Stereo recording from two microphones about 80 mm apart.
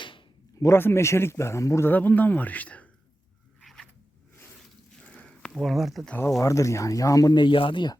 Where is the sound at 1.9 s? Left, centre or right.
Left.